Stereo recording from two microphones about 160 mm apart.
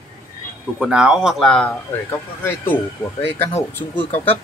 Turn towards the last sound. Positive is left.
turn(degrees=10)  # may be behind; listen again after turning